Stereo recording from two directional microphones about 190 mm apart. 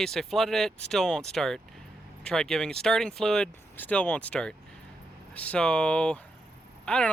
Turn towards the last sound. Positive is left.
turn(degrees=5)  # may be behind; listen again after turning